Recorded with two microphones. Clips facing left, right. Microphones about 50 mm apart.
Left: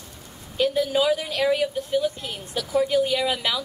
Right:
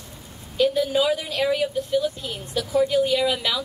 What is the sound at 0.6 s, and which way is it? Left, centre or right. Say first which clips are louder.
A woman's voice: right 1 dB; centre.